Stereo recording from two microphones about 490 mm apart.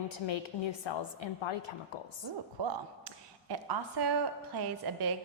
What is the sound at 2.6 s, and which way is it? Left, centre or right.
Speech, right.